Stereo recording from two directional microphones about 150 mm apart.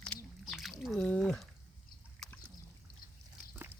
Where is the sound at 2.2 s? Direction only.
5° left (ahead or behind).